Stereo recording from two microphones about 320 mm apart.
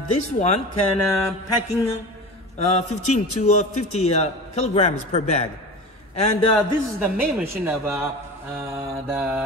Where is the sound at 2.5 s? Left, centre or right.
Left.